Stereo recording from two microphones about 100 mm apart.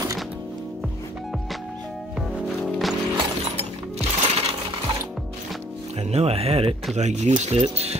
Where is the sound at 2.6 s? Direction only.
Centre (ahead or behind).